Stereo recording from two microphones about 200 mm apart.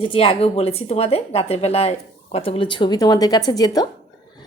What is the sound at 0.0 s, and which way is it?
A woman's voice, 25° left (ahead or behind).